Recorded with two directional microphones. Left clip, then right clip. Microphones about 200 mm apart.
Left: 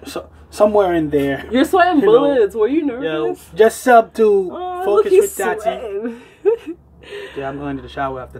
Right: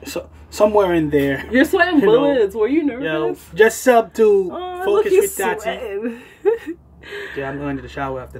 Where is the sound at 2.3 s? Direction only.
45° right (ahead or behind).